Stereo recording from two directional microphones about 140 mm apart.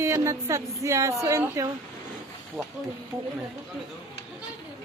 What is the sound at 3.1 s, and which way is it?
Speech, 15° right (ahead or behind).